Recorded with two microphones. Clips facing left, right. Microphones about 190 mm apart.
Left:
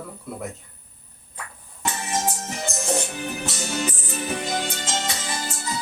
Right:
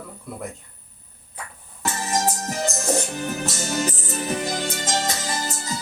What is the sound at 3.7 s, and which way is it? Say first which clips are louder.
Music: right 2 dB; 40° right (ahead or behind).